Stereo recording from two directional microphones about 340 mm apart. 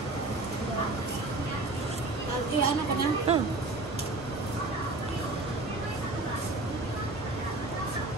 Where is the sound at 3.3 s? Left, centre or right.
Centre.